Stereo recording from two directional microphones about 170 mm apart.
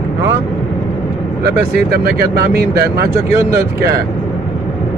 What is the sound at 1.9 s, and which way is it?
Speech, 65° right (ahead or behind).